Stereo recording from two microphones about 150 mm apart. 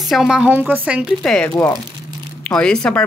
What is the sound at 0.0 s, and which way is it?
A woman's voice, 5° right (ahead or behind).